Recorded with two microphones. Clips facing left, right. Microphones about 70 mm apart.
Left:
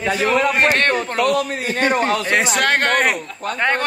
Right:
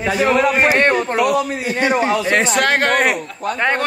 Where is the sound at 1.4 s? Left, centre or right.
Left.